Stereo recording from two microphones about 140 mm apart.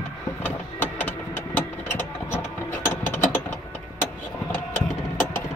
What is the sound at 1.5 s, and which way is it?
Vehicle, 15° left (ahead or behind).